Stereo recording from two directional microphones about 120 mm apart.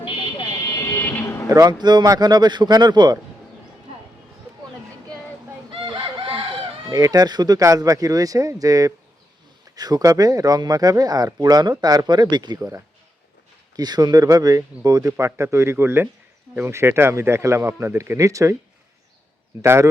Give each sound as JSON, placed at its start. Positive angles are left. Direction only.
{"t": 0.5, "sound": "vehicle", "side_deg": 30}
{"t": 1.5, "sound": "speech", "side_deg": -30}
{"t": 5.7, "sound": "chicken", "side_deg": -45}
{"t": 6.9, "sound": "a man's voice", "side_deg": -30}
{"t": 19.6, "sound": "a man's voice", "side_deg": -20}